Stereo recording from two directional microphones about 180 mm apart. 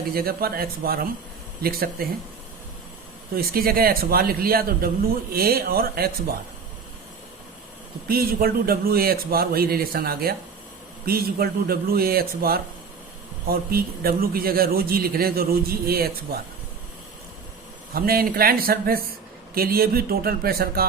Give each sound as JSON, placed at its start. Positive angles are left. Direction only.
{"t": 0.1, "sound": "a man's voice", "side_deg": -55}
{"t": 3.3, "sound": "a man's voice", "side_deg": -55}
{"t": 8.0, "sound": "a man's voice", "side_deg": -55}
{"t": 17.9, "sound": "a man's voice", "side_deg": -55}